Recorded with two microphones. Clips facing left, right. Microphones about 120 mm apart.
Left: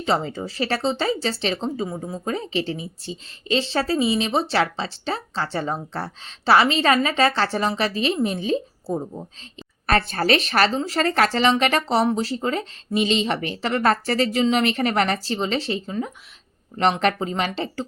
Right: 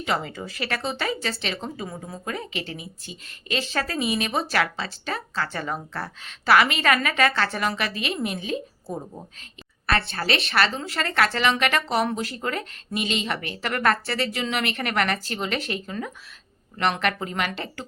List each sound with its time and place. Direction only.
0.0 s speech: 30° left (ahead or behind)